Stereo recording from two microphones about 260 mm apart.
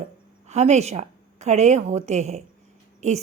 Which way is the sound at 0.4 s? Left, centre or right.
Right.